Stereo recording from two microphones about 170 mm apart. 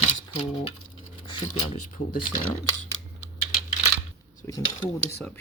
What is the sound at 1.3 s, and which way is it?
Speech, 30° left (ahead or behind).